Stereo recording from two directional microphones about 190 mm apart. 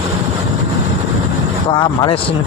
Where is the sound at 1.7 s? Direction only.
25° left (ahead or behind).